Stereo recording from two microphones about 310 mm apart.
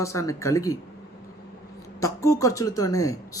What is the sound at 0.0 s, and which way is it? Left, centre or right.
Speech, centre.